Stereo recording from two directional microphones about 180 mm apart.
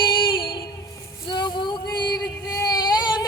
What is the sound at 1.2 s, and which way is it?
Female singing, 25° left (ahead or behind).